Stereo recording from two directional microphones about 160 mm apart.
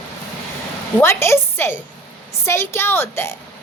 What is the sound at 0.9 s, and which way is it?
A woman's voice, 15° left (ahead or behind).